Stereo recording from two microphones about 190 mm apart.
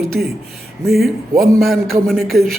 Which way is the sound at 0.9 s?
Centre (ahead or behind).